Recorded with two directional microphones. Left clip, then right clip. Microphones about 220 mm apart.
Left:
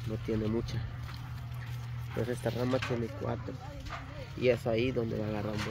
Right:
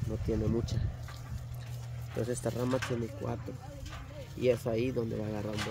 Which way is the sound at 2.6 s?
35° right (ahead or behind).